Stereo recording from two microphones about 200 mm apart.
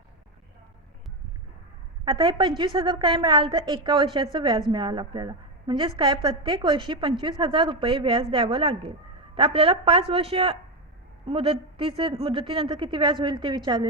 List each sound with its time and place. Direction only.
2.0 s a woman's voice: 20° right (ahead or behind)